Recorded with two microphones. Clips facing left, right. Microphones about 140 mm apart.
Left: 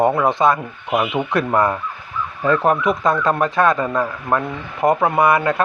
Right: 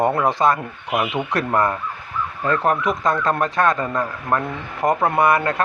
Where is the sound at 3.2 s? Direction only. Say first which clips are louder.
Left 2 dB; 5° left (ahead or behind).